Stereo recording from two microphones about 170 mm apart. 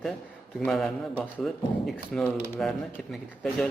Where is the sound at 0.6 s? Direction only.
5° left (ahead or behind).